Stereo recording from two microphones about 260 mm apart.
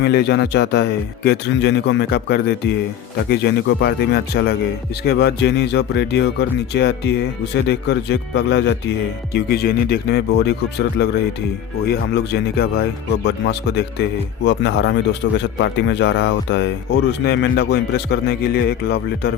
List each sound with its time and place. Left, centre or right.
0.0 s speech: left